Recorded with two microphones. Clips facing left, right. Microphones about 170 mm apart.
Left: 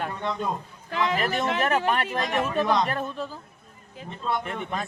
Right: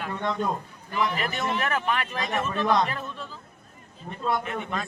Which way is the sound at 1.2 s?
40° left (ahead or behind).